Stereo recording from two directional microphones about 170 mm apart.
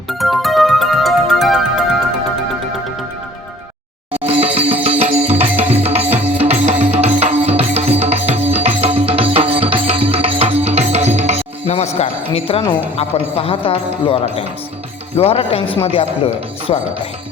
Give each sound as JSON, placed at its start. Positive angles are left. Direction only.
{"t": 0.1, "sound": "music", "side_deg": 0}
{"t": 4.3, "sound": "music", "side_deg": -35}
{"t": 5.5, "sound": "music", "side_deg": -10}
{"t": 5.8, "sound": "music", "side_deg": -35}
{"t": 11.9, "sound": "a sound", "side_deg": 35}
{"t": 13.0, "sound": "speech", "side_deg": 35}